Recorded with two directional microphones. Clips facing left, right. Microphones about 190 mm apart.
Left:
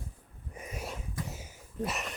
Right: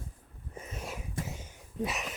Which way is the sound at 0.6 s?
10° left (ahead or behind).